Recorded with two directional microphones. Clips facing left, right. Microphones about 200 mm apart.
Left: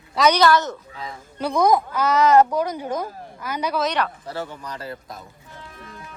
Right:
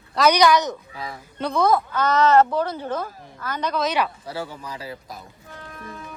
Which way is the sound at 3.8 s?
5° right (ahead or behind).